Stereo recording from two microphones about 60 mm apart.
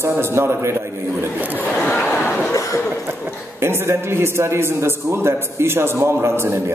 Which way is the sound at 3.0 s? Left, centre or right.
Right.